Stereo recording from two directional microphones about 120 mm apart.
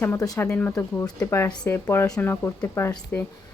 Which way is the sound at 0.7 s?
25° left (ahead or behind).